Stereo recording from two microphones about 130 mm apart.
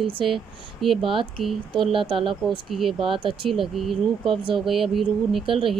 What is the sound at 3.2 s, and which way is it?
Speech, 40° right (ahead or behind).